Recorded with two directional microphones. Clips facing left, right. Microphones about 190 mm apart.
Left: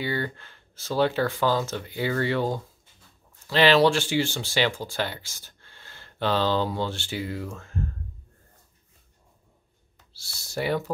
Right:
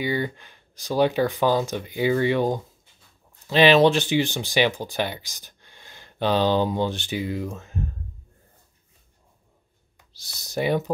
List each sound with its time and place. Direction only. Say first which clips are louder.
0.0 s speech: right 3 dB; 15° right (ahead or behind)
9.9 s speech: right 1 dB; 20° right (ahead or behind)